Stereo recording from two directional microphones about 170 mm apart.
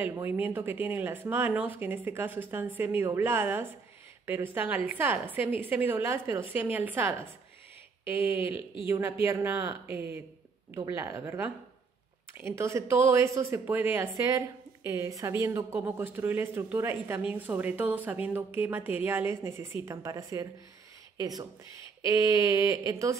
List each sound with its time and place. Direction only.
0.0 s speech: 10° right (ahead or behind)